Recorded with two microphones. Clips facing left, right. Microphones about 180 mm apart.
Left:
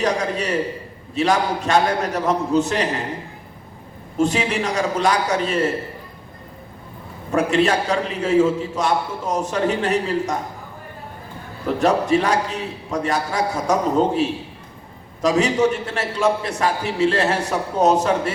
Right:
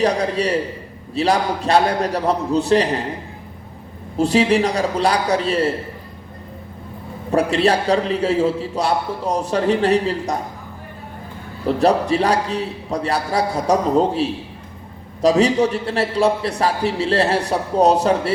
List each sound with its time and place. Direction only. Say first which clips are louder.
0.0 s a man's voice: right 3 dB; 35° right (ahead or behind)
4.2 s a man's voice: right 4 dB; 35° right (ahead or behind)
7.3 s a man's voice: right 1 dB; 35° right (ahead or behind)
11.6 s a man's voice: right 2 dB; 35° right (ahead or behind)